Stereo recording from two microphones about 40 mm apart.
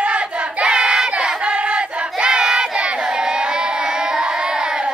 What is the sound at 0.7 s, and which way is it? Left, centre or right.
Crowd, centre.